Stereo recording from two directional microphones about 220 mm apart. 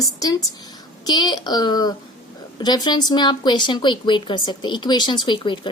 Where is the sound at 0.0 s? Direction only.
15° left (ahead or behind).